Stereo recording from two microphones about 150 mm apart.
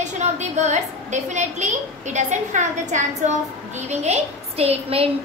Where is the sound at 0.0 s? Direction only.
50° right (ahead or behind).